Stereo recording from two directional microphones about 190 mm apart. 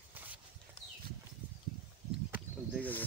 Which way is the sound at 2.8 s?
10° left (ahead or behind).